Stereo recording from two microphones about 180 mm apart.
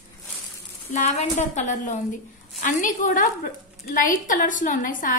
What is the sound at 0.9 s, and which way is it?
A woman's voice, 40° left (ahead or behind).